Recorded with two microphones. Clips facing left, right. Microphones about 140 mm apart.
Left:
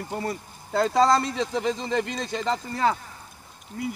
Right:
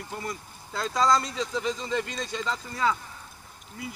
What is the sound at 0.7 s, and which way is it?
Speech, 55° left (ahead or behind).